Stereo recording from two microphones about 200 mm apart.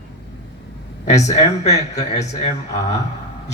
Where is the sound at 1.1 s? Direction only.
35° left (ahead or behind).